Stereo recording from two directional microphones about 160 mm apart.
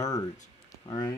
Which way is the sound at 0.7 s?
25° left (ahead or behind).